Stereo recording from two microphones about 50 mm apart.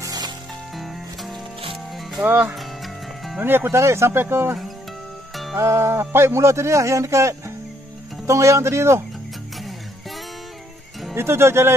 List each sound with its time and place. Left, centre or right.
0.7 s music: centre
2.1 s speech: right
2.5 s music: centre
3.4 s speech: right
3.7 s speech: right
4.2 s speech: right
5.3 s music: centre
5.6 s speech: right
9.6 s music: centre
11.1 s speech: right